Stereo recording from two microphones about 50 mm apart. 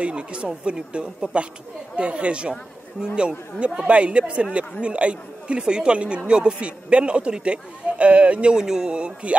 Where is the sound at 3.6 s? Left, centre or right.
Right.